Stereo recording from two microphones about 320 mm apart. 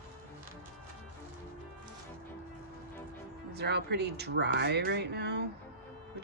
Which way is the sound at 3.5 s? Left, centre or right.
Right.